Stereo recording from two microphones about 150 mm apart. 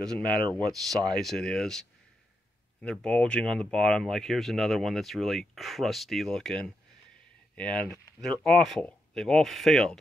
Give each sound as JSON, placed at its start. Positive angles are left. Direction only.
{"t": 0.0, "sound": "speech", "side_deg": 5}
{"t": 0.5, "sound": "speech", "side_deg": -25}
{"t": 1.1, "sound": "speech", "side_deg": 5}